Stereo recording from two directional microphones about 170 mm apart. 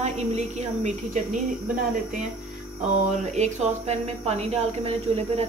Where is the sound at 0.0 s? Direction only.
40° right (ahead or behind).